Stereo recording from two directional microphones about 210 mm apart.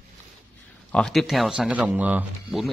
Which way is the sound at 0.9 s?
Centre (ahead or behind).